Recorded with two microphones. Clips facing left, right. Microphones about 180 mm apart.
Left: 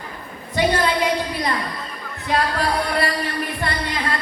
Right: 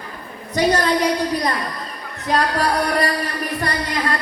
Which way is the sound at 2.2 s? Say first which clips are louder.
Right 2 dB; 40° right (ahead or behind).